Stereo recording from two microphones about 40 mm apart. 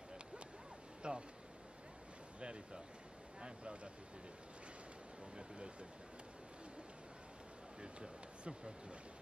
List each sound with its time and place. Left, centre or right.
1.0 s vehicle: right
2.4 s a sound: right
3.3 s speech: right
5.3 s speech: right
7.8 s speech: right